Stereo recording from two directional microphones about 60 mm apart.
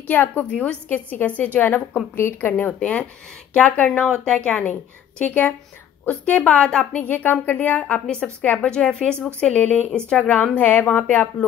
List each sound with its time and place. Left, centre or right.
0.0 s a woman's voice: left
0.5 s a woman's voice: centre
0.8 s a woman's voice: left
2.1 s a woman's voice: left
2.5 s a woman's voice: left
6.9 s a woman's voice: left
7.9 s a woman's voice: centre